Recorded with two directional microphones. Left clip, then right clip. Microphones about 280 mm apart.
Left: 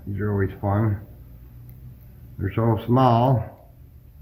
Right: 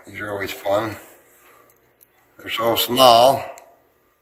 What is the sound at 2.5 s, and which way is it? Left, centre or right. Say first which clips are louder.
Speech: right 5 dB; right.